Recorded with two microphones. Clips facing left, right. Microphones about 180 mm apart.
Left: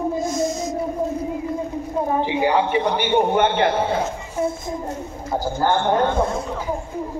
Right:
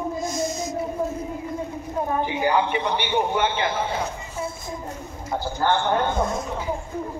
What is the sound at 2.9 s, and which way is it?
A man's voice, 50° left (ahead or behind).